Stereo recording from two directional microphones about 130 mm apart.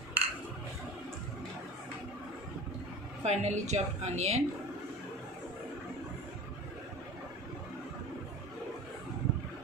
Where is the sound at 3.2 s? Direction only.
60° right (ahead or behind).